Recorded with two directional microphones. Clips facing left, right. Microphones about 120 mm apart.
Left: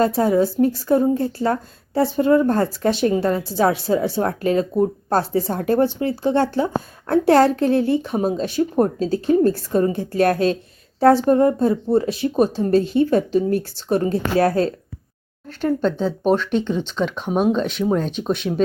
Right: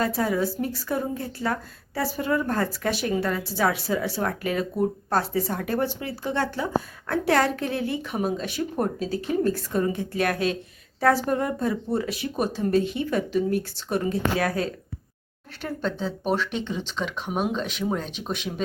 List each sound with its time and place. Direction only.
0.0 s a woman's voice: 25° left (ahead or behind)
15.6 s speech: centre (ahead or behind)